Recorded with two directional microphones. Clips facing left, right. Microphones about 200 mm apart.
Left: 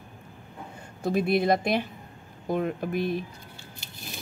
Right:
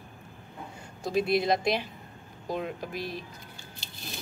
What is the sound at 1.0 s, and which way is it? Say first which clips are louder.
Speech: left 2 dB; 55° left (ahead or behind).